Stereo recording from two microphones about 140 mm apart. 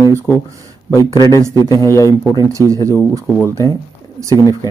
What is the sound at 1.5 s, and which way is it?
Speech, 25° left (ahead or behind).